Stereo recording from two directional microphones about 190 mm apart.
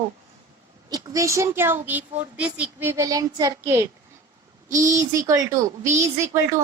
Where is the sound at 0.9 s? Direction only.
20° right (ahead or behind).